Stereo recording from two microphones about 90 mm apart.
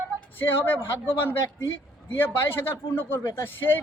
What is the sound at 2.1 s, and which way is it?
A man's voice, 25° left (ahead or behind).